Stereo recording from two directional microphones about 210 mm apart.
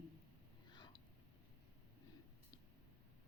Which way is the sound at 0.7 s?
20° left (ahead or behind).